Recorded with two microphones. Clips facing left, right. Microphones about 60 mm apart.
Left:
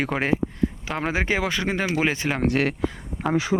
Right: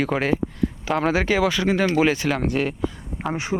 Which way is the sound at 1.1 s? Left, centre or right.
Left.